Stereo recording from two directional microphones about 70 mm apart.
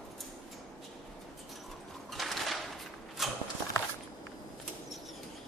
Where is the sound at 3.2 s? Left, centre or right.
Centre.